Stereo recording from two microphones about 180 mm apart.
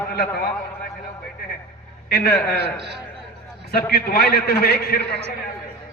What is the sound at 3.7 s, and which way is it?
A man's voice, 60° left (ahead or behind).